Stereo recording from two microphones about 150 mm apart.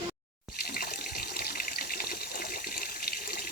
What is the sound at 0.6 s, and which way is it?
Water, 90° left.